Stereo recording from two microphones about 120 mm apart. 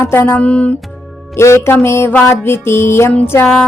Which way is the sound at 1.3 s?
25° left (ahead or behind).